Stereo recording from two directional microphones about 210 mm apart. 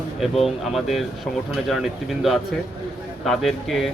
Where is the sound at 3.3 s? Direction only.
Centre (ahead or behind).